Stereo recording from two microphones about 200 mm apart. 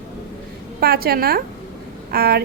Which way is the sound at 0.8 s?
50° right (ahead or behind).